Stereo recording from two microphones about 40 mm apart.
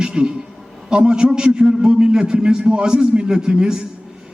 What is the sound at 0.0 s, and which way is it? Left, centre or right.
A man's voice, right.